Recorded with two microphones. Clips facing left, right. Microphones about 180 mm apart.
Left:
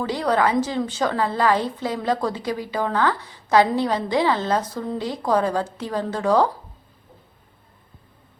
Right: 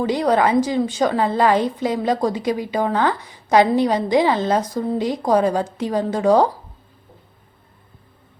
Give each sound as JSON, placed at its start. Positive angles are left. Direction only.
{"t": 0.0, "sound": "a woman's voice", "side_deg": -20}